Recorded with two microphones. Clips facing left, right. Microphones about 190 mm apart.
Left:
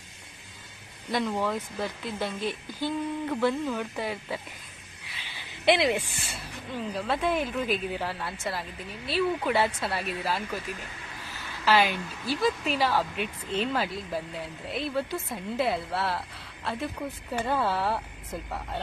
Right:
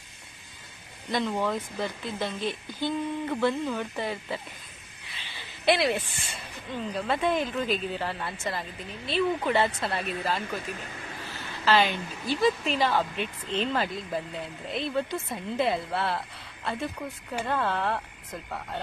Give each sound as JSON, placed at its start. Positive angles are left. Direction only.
{"t": 1.1, "sound": "speech", "side_deg": 5}
{"t": 5.1, "sound": "a sound", "side_deg": 15}
{"t": 6.9, "sound": "speech", "side_deg": 0}
{"t": 11.6, "sound": "speech", "side_deg": 10}
{"t": 17.4, "sound": "speech", "side_deg": 5}